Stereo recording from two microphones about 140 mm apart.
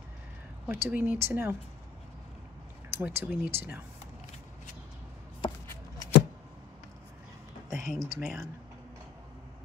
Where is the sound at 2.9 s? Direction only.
15° right (ahead or behind).